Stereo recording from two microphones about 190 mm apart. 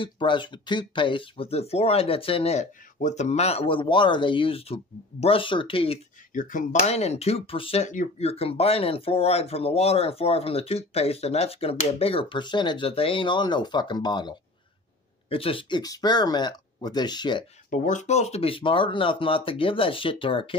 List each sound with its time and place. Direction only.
0.0 s speech: 25° left (ahead or behind)
6.3 s speech: 45° left (ahead or behind); by 17.5 s 25° left (ahead or behind)
17.6 s speech: 40° left (ahead or behind)